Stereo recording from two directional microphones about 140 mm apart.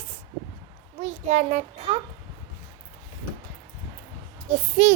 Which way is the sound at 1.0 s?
55° right (ahead or behind).